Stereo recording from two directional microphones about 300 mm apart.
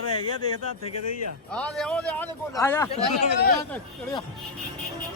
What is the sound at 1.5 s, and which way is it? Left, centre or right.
A man's voice, centre.